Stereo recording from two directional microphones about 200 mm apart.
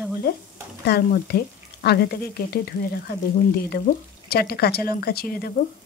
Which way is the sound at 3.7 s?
50° left (ahead or behind).